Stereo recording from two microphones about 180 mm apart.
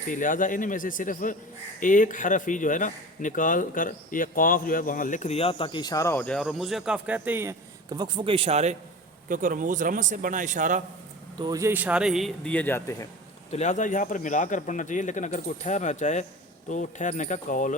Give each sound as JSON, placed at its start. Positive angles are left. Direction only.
{"t": 0.1, "sound": "speech", "side_deg": 45}
{"t": 9.3, "sound": "a man's voice", "side_deg": -45}
{"t": 11.3, "sound": "a man's voice", "side_deg": -20}
{"t": 13.5, "sound": "speech", "side_deg": 40}